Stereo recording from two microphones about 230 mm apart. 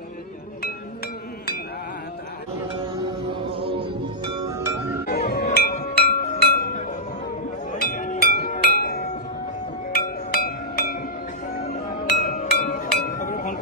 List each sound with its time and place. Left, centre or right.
4.2 s music: centre
5.0 s music: left
7.7 s music: left
12.3 s music: left